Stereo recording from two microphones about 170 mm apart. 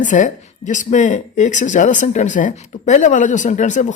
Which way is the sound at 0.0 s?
45° left (ahead or behind).